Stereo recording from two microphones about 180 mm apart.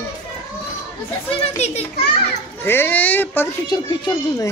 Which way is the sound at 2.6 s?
10° left (ahead or behind).